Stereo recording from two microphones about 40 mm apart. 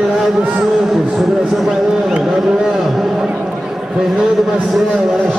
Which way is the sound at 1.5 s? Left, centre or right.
Centre.